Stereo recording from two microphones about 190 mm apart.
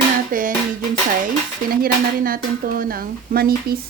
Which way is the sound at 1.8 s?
50° right (ahead or behind).